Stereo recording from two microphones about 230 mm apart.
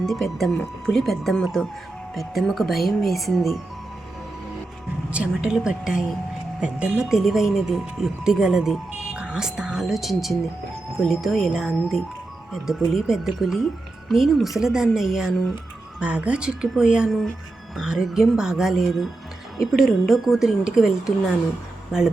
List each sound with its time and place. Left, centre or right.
0.0 s speech: centre
5.1 s speech: centre